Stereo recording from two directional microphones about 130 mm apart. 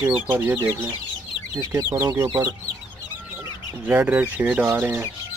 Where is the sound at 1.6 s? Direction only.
30° right (ahead or behind).